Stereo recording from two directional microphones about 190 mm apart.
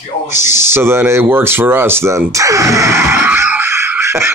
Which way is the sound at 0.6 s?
15° right (ahead or behind).